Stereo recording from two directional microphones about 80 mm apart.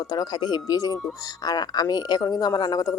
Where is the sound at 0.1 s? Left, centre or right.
Left.